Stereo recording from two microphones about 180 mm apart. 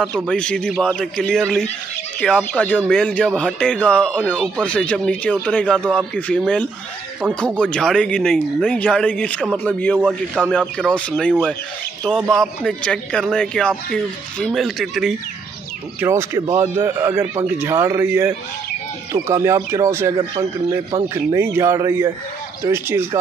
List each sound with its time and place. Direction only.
0.0 s speech: 5° left (ahead or behind)
9.9 s speech: 5° right (ahead or behind)
11.0 s speech: 5° left (ahead or behind)
16.0 s speech: 15° right (ahead or behind)